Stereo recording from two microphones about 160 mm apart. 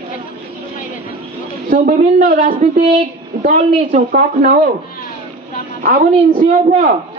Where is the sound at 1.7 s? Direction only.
55° right (ahead or behind).